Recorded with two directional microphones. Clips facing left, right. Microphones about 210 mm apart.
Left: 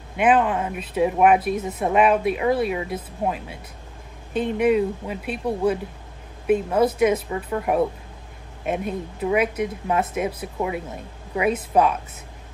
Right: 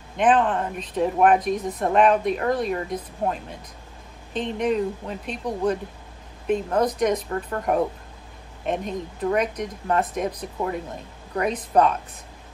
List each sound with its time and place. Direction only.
0.1 s speech: 10° left (ahead or behind)